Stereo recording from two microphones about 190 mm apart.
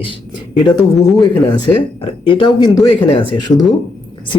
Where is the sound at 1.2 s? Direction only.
20° left (ahead or behind).